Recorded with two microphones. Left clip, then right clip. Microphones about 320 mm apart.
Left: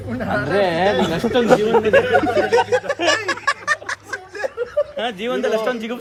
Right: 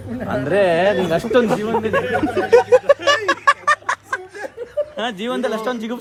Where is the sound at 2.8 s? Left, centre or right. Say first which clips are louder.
Right 4 dB; centre.